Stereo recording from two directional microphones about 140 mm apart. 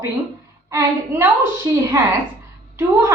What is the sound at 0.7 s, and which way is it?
Speech, 20° right (ahead or behind).